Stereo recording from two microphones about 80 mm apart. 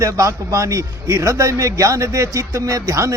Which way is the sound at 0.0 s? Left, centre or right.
Right.